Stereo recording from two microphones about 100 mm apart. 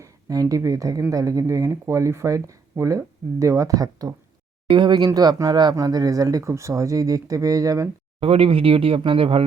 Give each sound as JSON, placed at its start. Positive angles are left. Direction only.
{"t": 0.0, "sound": "speech", "side_deg": -35}
{"t": 4.7, "sound": "speech", "side_deg": -50}
{"t": 8.2, "sound": "speech", "side_deg": -70}